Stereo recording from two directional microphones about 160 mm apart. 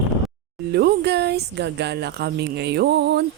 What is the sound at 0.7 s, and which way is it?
Speech, 90° right.